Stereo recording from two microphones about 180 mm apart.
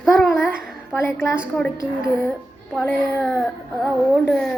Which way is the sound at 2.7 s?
10° left (ahead or behind).